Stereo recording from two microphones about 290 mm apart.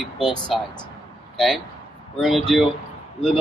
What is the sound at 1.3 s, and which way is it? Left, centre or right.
Speech, centre.